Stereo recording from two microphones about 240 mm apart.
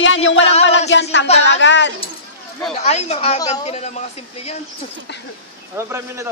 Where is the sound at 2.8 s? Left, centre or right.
Left.